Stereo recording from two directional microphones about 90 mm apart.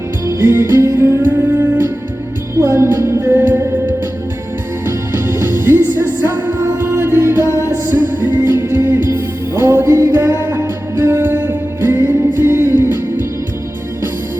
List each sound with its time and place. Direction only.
0.3 s music: 30° right (ahead or behind)
1.3 s humming: 20° right (ahead or behind)
2.6 s music: 30° right (ahead or behind)
7.4 s music: 35° left (ahead or behind)
7.7 s music: 25° right (ahead or behind)